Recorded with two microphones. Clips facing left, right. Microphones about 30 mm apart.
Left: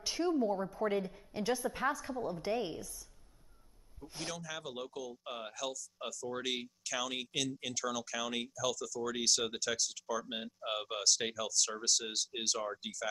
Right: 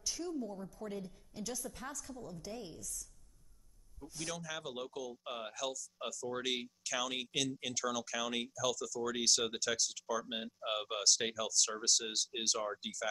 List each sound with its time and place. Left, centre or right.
0.0 s a woman's voice: left
4.0 s a man's voice: centre
4.4 s speech: centre